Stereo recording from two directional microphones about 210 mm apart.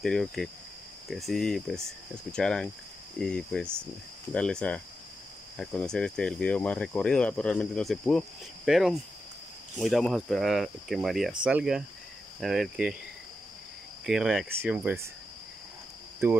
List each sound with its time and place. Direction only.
0.0 s cricket: centre (ahead or behind)
14.0 s cricket: centre (ahead or behind)